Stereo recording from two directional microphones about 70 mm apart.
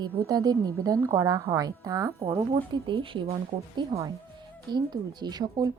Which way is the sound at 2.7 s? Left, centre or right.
Right.